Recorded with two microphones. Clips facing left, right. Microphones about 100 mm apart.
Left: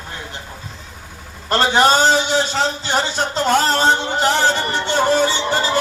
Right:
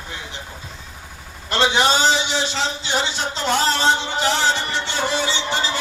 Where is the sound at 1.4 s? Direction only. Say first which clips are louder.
Left 4 dB; 45° left (ahead or behind).